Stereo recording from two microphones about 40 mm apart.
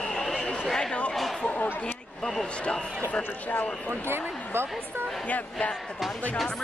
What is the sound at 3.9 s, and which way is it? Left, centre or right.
Speech, right.